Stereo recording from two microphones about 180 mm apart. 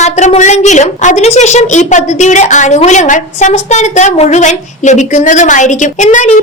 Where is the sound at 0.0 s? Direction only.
40° left (ahead or behind).